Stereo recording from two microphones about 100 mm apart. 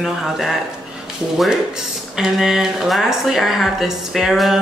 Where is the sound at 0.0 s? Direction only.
5° right (ahead or behind).